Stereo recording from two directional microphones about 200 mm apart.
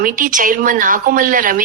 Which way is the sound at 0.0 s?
40° right (ahead or behind).